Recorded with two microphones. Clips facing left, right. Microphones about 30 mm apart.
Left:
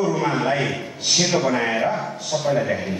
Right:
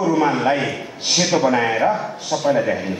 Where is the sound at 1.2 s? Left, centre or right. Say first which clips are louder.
Right 5 dB; centre.